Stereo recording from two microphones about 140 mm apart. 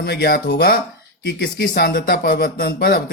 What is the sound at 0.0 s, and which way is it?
Speech, 90° left.